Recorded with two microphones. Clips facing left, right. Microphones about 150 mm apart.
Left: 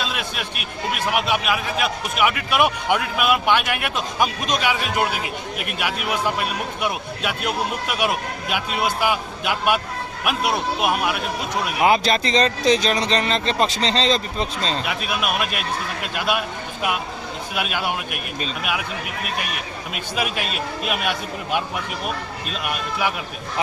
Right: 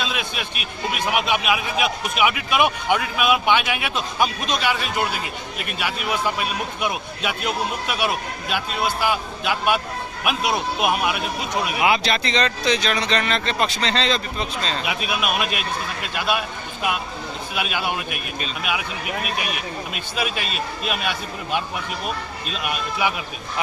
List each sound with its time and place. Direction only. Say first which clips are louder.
0.0 s a man's voice: even; centre (ahead or behind)
11.8 s speech: left 4 dB; 40° left (ahead or behind)
14.8 s a man's voice: even; 5° right (ahead or behind)
17.5 s a man's voice: left 1 dB; centre (ahead or behind)
19.9 s a man's voice: left 3 dB; 5° left (ahead or behind)
22.6 s a man's voice: right 1 dB; centre (ahead or behind)